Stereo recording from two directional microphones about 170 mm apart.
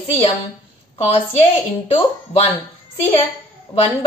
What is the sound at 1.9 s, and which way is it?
Speech, 35° left (ahead or behind).